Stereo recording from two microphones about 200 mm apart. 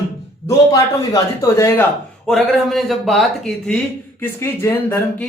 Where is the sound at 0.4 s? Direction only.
15° left (ahead or behind).